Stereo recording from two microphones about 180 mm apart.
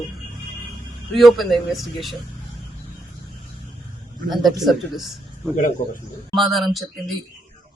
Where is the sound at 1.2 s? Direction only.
Centre (ahead or behind).